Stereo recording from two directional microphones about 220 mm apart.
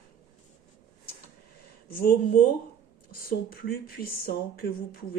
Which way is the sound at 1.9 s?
40° left (ahead or behind).